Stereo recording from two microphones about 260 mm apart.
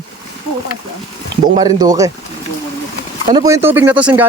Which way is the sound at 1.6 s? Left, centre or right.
Centre.